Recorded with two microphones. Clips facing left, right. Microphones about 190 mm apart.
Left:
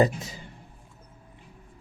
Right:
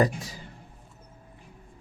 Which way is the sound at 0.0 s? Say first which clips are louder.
Left 2 dB; 25° left (ahead or behind).